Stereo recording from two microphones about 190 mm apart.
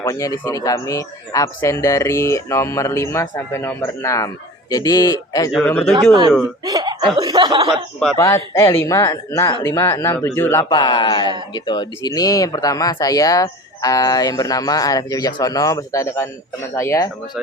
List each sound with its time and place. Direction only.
0.0 s speech: 15° left (ahead or behind)
5.6 s speech: 5° left (ahead or behind)
6.7 s laughter: 20° right (ahead or behind)
7.2 s speech: 25° right (ahead or behind)
8.1 s speech: 15° left (ahead or behind)